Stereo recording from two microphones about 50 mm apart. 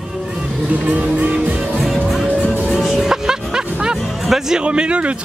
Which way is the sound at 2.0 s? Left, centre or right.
Centre.